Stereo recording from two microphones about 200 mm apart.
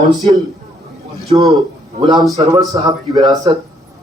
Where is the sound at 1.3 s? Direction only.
25° right (ahead or behind).